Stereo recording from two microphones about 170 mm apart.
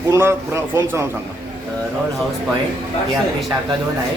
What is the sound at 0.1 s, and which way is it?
Speech, 15° right (ahead or behind).